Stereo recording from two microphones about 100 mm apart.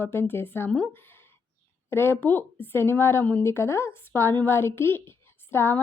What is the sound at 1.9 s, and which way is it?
A woman's voice, 25° left (ahead or behind).